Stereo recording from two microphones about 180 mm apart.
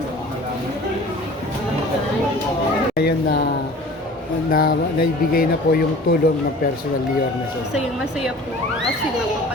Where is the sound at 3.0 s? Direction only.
60° left (ahead or behind).